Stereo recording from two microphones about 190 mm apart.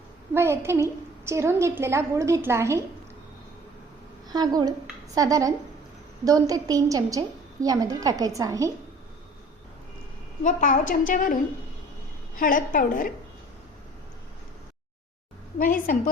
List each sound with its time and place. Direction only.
0.3 s a woman's voice: 15° right (ahead or behind)
4.3 s a woman's voice: 20° right (ahead or behind)
10.4 s a woman's voice: 40° left (ahead or behind)
12.4 s a woman's voice: 45° left (ahead or behind)
15.5 s a woman's voice: 45° left (ahead or behind)